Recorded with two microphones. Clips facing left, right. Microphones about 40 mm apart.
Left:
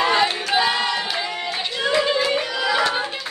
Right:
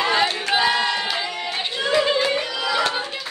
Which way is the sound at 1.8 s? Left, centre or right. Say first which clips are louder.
Even; centre.